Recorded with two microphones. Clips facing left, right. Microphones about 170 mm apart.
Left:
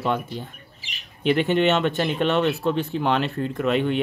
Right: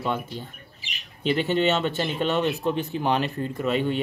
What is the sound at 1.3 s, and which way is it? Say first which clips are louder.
Speech: left 3 dB; 55° left (ahead or behind).